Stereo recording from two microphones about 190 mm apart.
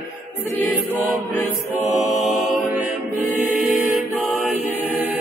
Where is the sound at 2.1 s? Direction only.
Centre (ahead or behind).